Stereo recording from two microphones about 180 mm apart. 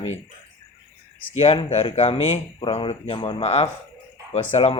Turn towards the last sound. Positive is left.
turn(degrees=35)  # may be behind; listen again after turning